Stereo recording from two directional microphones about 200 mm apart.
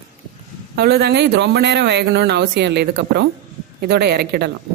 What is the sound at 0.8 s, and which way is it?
Speech, 50° right (ahead or behind).